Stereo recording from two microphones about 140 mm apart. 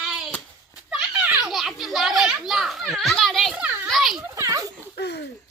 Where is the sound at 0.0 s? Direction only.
Centre (ahead or behind).